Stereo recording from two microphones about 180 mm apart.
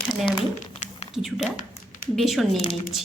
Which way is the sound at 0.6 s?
40° left (ahead or behind).